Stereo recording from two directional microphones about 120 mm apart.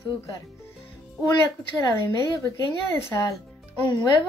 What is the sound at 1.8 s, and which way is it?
A woman's voice, 25° left (ahead or behind).